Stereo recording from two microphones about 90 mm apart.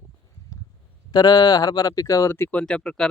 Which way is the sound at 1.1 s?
50° left (ahead or behind).